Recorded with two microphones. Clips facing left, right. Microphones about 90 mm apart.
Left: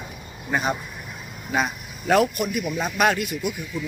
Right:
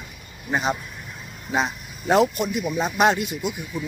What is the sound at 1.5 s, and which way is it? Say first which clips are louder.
Speech: even; 20° right (ahead or behind).